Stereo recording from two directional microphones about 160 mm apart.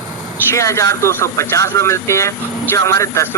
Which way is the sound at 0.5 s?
20° left (ahead or behind).